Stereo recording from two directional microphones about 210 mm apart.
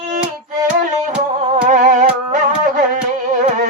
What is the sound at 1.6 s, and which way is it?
Music, 35° right (ahead or behind).